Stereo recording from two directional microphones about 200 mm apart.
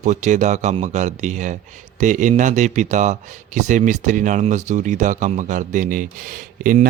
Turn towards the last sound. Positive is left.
turn(degrees=-45)  # may be behind; listen again after turning